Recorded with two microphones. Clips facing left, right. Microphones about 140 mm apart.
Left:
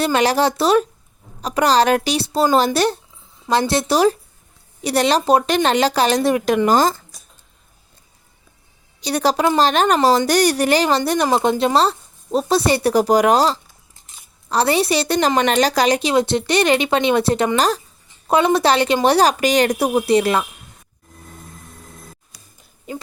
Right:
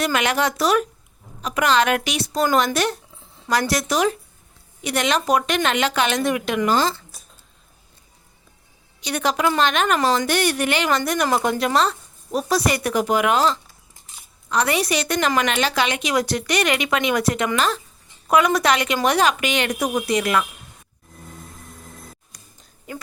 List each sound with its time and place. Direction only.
0.0 s a woman's voice: 35° left (ahead or behind)
9.0 s a woman's voice: 35° left (ahead or behind)
22.3 s a sound: 5° left (ahead or behind)